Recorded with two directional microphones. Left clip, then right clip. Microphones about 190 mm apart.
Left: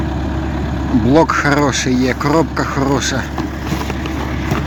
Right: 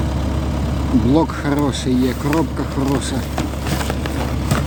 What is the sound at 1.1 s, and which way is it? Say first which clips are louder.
Speech: left 9 dB; centre (ahead or behind).